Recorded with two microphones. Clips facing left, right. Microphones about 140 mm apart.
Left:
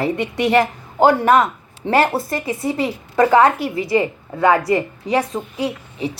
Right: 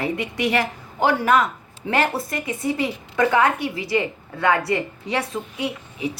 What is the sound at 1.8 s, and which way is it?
A woman's voice, 35° left (ahead or behind).